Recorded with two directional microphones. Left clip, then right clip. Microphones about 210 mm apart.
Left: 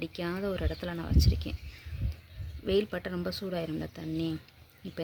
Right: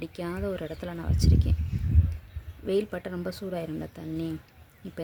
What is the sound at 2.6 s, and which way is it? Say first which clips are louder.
Speech: right 1 dB; centre (ahead or behind).